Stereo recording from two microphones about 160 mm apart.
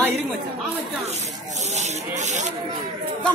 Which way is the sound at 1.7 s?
45° right (ahead or behind).